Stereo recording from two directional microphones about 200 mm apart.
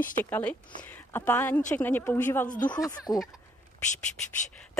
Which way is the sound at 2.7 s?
20° left (ahead or behind).